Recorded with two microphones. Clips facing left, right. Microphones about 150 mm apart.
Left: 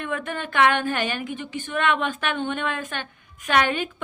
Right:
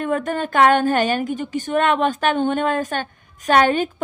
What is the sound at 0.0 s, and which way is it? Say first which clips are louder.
A woman's voice: right 7 dB; 40° right (ahead or behind).